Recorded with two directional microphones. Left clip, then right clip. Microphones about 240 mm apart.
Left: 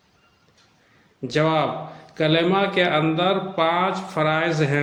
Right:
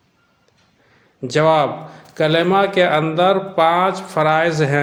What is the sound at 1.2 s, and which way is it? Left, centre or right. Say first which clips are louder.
A man's voice: right 6 dB; right.